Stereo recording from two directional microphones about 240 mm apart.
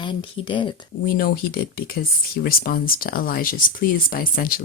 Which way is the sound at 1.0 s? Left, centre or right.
Left.